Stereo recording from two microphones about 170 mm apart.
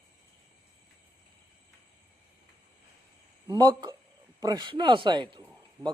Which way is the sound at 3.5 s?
25° right (ahead or behind).